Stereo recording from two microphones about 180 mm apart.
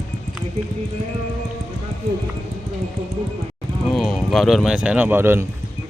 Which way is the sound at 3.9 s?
Centre (ahead or behind).